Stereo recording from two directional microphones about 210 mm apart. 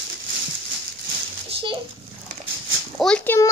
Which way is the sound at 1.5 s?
25° right (ahead or behind).